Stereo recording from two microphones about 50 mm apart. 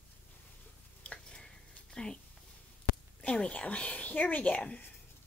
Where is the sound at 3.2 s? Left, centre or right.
Left.